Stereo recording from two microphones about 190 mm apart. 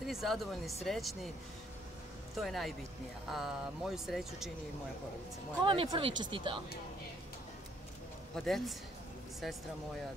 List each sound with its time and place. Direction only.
0.0 s speech: centre (ahead or behind)
2.3 s speech: centre (ahead or behind)
5.6 s speech: 25° right (ahead or behind)
8.4 s speech: centre (ahead or behind)